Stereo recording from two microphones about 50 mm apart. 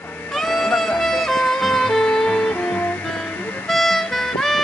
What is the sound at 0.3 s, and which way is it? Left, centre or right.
Music, centre.